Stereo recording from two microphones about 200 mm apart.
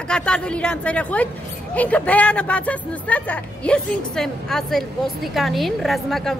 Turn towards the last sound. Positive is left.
turn(degrees=0)  # may be behind; listen again after turning